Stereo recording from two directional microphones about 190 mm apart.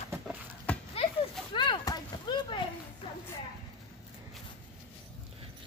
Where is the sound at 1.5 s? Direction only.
25° left (ahead or behind).